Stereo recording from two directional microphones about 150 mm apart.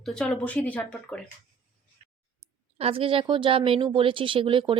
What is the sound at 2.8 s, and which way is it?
A woman's voice, 40° right (ahead or behind).